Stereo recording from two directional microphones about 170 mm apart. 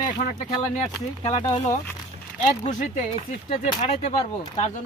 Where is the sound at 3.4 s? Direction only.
30° left (ahead or behind).